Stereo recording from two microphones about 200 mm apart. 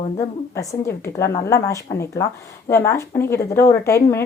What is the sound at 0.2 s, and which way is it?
A woman's voice, 15° left (ahead or behind).